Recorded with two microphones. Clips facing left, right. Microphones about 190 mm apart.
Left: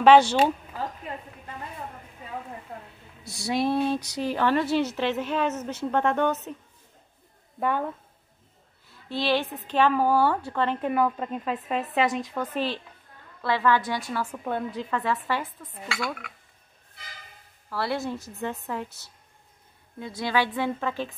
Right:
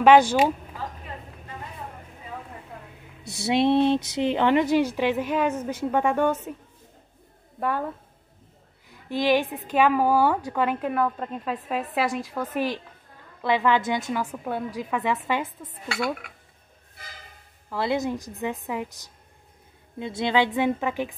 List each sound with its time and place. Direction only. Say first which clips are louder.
0.0 s a woman's voice: right 1 dB; 10° right (ahead or behind)
3.3 s a woman's voice: right 5 dB; 25° right (ahead or behind)
7.6 s a woman's voice: even; centre (ahead or behind)
8.8 s a woman's voice: right 4 dB; 15° right (ahead or behind)
10.9 s a woman's voice: left 1 dB; centre (ahead or behind); by 15.4 s 15° right (ahead or behind)
17.6 s a woman's voice: right 3 dB; 20° right (ahead or behind)